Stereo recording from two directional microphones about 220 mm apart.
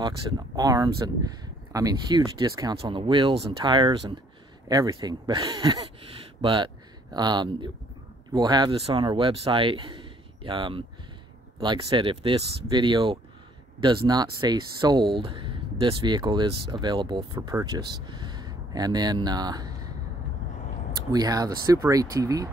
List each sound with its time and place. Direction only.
0.6 s speech: 15° right (ahead or behind)
21.1 s speech: 15° right (ahead or behind)